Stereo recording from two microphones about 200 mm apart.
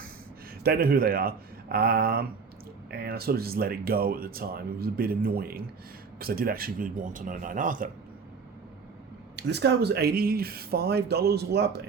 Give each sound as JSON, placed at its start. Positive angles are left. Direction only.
{"t": 0.6, "sound": "speech", "side_deg": -50}
{"t": 9.3, "sound": "speech", "side_deg": -55}